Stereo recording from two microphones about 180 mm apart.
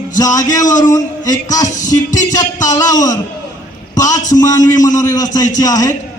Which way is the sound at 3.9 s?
20° left (ahead or behind).